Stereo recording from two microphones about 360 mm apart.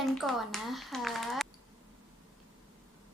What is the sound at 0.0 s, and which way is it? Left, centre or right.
Speech, centre.